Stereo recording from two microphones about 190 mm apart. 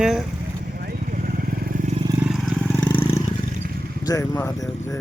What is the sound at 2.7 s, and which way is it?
Vehicle, 10° left (ahead or behind).